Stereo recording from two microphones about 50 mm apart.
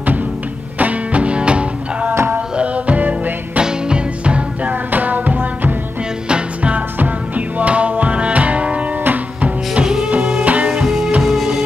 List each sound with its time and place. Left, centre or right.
0.7 s music: right
3.5 s music: right
4.9 s music: right
6.2 s music: right
9.8 s music: centre
10.4 s music: right
10.7 s music: centre